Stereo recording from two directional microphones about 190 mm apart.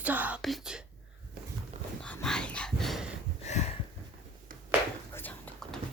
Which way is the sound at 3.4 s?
35° left (ahead or behind).